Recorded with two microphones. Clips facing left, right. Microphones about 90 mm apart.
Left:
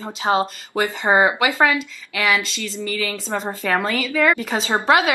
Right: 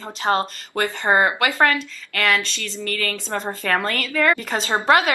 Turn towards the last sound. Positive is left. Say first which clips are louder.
# left 1 dB
turn(degrees=0)  # may be behind; listen again after turning